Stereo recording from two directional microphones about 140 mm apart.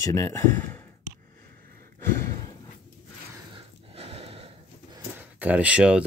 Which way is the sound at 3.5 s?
45° right (ahead or behind).